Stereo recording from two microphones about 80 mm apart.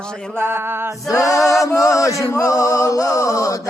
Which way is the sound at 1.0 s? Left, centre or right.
Left.